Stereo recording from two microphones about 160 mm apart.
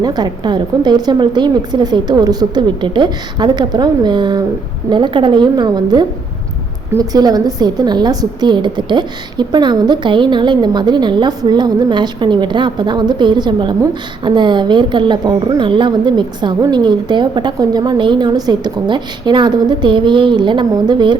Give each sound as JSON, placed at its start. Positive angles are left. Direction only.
{"t": 0.0, "sound": "a woman's voice", "side_deg": -25}